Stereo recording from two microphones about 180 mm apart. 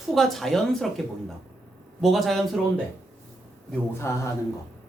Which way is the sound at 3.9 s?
15° left (ahead or behind).